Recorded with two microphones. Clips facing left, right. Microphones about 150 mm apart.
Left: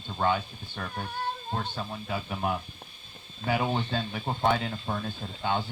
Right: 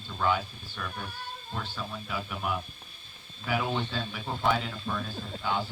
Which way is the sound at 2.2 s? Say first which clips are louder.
Left 4 dB; 35° left (ahead or behind).